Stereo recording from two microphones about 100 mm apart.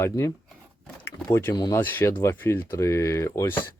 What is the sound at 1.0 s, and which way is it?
Speech, 25° left (ahead or behind).